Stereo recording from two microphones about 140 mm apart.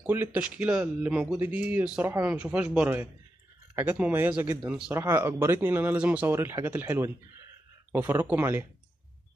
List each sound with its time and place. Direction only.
0.0 s speech: 15° right (ahead or behind)